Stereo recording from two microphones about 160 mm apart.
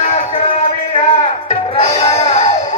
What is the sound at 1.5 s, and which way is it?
Music, 40° left (ahead or behind).